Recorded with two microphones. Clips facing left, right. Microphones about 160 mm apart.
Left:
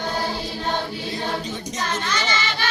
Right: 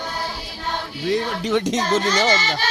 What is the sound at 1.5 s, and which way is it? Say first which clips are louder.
Music: right 11 dB; 90° right.